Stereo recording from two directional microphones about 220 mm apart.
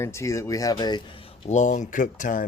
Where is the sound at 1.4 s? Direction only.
35° left (ahead or behind).